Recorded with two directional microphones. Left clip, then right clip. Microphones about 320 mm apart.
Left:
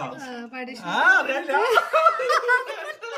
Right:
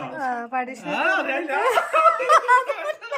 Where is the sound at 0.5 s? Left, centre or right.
Centre.